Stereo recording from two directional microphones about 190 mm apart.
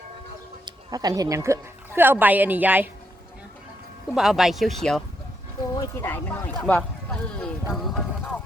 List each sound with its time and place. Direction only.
0.6 s a woman's voice: 20° right (ahead or behind)
4.1 s speech: centre (ahead or behind)
5.7 s speech: 15° left (ahead or behind); by 8.0 s centre (ahead or behind)